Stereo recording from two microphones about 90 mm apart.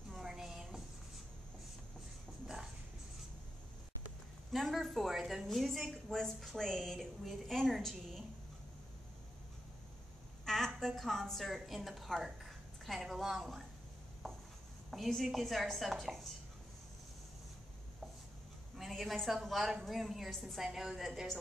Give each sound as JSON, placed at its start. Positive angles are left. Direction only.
{"t": 0.1, "sound": "a sound", "side_deg": -5}
{"t": 2.4, "sound": "a sound", "side_deg": -5}
{"t": 4.5, "sound": "a woman's voice", "side_deg": 0}
{"t": 10.4, "sound": "a woman's voice", "side_deg": 5}
{"t": 14.2, "sound": "chopping", "side_deg": 5}
{"t": 14.9, "sound": "a woman's voice", "side_deg": 0}
{"t": 18.8, "sound": "a woman's voice", "side_deg": 0}